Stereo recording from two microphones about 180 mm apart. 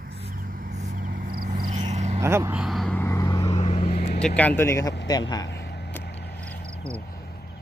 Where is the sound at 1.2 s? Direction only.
55° right (ahead or behind).